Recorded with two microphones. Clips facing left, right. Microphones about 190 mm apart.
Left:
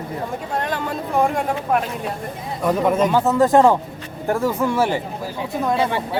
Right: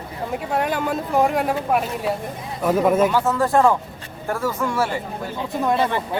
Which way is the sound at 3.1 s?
20° left (ahead or behind).